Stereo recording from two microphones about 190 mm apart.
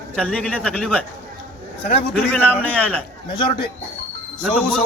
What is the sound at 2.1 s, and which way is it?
Speech, 10° left (ahead or behind).